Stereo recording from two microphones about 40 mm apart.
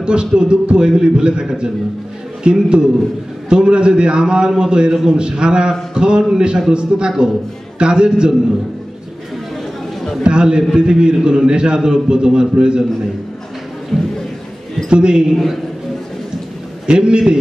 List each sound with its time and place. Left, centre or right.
0.0 s a man's voice: right
2.4 s a man's voice: right
10.2 s a man's voice: right
13.9 s a sound: centre
14.9 s a man's voice: right
16.8 s a man's voice: right